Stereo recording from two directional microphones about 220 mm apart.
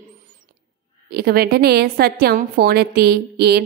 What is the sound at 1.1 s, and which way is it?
A woman's voice, 45° right (ahead or behind).